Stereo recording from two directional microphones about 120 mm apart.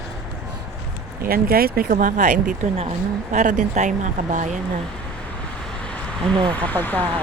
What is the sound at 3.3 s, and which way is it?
Speech, 85° right.